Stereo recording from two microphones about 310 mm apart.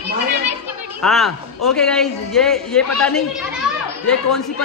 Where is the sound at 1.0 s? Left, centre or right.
Centre.